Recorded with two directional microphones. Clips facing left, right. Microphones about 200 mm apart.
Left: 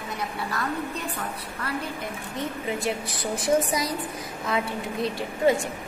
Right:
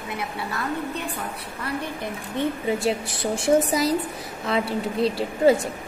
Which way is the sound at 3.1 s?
Centre (ahead or behind).